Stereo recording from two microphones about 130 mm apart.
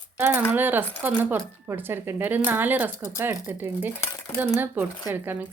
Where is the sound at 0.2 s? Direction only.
15° right (ahead or behind).